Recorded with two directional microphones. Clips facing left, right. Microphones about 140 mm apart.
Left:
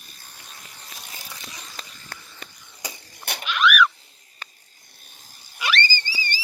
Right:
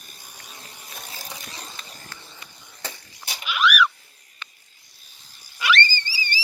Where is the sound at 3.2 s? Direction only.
55° left (ahead or behind).